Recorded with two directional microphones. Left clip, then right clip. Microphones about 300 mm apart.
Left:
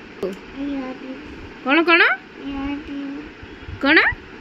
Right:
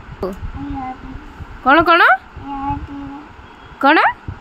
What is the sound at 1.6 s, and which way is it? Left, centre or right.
Speech, right.